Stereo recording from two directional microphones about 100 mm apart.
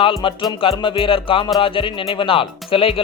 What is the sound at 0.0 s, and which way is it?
Speech, 60° left (ahead or behind).